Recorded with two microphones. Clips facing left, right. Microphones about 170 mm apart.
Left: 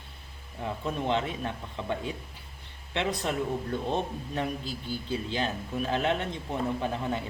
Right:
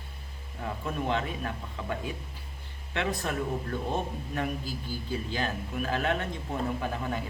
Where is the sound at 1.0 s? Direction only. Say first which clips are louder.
Left 2 dB; 25° left (ahead or behind).